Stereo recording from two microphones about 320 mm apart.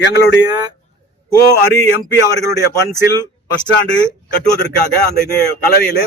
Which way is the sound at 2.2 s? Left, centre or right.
Centre.